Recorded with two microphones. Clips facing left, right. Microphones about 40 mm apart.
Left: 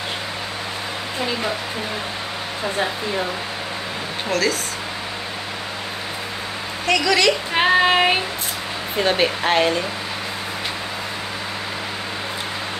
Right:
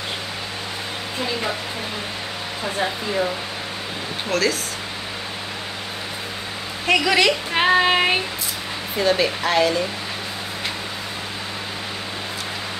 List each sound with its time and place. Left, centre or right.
4.3 s child singing: centre
6.9 s a woman's voice: centre
7.5 s child singing: centre
9.0 s speech: left